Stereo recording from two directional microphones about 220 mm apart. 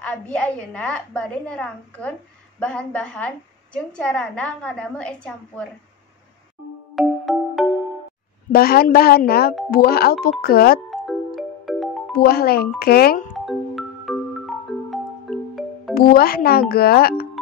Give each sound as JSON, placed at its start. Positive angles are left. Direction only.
{"t": 0.0, "sound": "a woman's voice", "side_deg": 5}
{"t": 7.0, "sound": "music", "side_deg": 0}
{"t": 8.5, "sound": "speech", "side_deg": 45}
{"t": 10.9, "sound": "music", "side_deg": 0}
{"t": 12.1, "sound": "speech", "side_deg": 45}
{"t": 13.5, "sound": "marimba", "side_deg": 0}
{"t": 15.9, "sound": "speech", "side_deg": 45}